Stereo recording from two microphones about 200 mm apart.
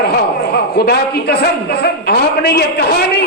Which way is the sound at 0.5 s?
55° left (ahead or behind).